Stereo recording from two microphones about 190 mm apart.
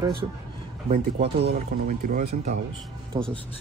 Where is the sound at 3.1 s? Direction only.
20° right (ahead or behind).